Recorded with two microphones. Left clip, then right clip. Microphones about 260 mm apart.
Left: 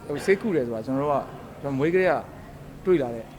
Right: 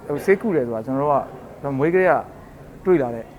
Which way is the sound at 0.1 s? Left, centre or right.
Centre.